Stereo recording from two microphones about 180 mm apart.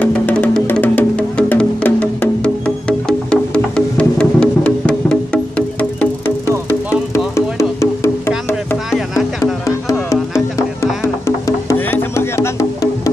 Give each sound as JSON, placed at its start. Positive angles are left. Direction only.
{"t": 0.0, "sound": "music", "side_deg": 10}
{"t": 7.3, "sound": "music", "side_deg": 15}
{"t": 9.4, "sound": "music", "side_deg": 15}